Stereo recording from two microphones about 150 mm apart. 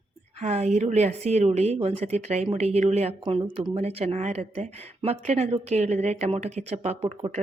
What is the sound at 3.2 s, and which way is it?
Speech, 35° right (ahead or behind).